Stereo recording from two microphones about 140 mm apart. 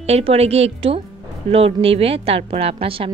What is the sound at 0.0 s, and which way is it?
A woman's voice, 50° right (ahead or behind).